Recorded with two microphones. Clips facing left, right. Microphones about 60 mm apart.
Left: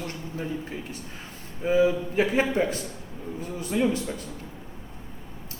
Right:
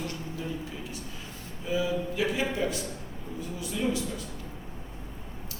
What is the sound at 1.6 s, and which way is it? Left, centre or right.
A man's voice, left.